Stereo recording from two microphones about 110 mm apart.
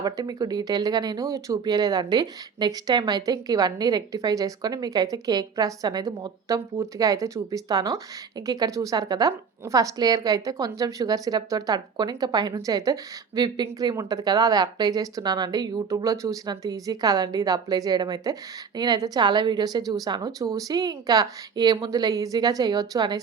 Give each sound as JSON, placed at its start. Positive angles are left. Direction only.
{"t": 0.0, "sound": "speech", "side_deg": -35}